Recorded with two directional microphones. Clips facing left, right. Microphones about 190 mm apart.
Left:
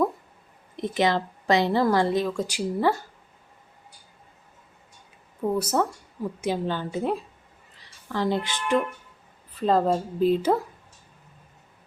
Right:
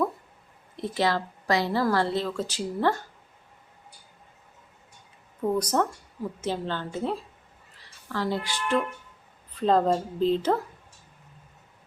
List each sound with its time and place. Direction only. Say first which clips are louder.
0.8 s a woman's voice: left 3 dB; 20° left (ahead or behind)
5.4 s a woman's voice: left 1 dB; 5° left (ahead or behind)
9.6 s a woman's voice: even; 5° left (ahead or behind)